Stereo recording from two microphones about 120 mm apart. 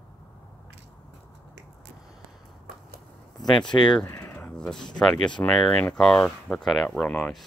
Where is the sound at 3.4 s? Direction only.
5° left (ahead or behind).